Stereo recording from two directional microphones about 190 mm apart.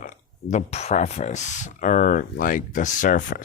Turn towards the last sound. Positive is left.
turn(degrees=45)  # may be behind; listen again after turning